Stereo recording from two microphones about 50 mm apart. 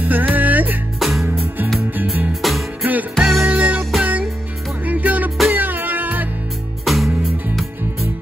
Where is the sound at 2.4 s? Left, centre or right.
Centre.